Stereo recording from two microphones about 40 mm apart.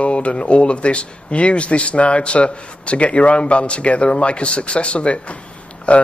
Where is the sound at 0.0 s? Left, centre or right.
Left.